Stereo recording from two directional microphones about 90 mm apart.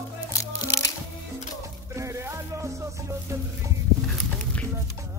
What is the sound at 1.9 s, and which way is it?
Music, 30° right (ahead or behind).